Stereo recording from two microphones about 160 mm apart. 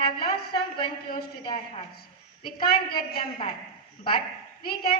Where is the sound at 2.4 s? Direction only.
65° left (ahead or behind).